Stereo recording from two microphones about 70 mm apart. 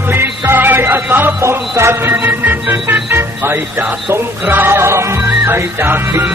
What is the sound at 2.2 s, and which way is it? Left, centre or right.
Organ, right.